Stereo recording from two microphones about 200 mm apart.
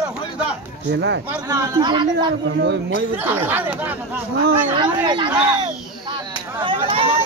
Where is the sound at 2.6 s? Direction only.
55° right (ahead or behind).